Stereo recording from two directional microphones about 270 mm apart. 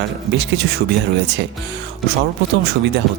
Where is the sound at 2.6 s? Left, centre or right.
Right.